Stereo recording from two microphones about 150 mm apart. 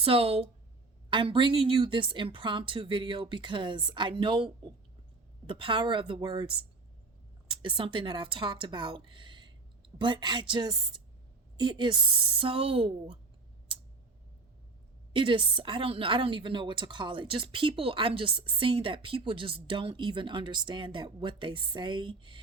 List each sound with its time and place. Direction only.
0.0 s a woman's voice: 40° right (ahead or behind)
5.5 s a woman's voice: 35° right (ahead or behind)
15.1 s a woman's voice: 35° right (ahead or behind)